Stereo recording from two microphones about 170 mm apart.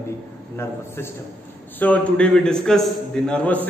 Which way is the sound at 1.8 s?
10° left (ahead or behind).